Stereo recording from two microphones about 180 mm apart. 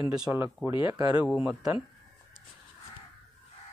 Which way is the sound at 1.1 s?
5° right (ahead or behind).